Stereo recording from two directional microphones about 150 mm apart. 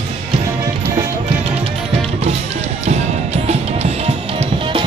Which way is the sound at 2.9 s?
45° right (ahead or behind).